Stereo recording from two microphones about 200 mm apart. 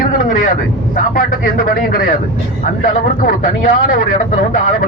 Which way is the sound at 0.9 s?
45° left (ahead or behind).